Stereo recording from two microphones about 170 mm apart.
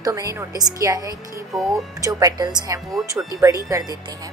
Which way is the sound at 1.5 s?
Centre (ahead or behind).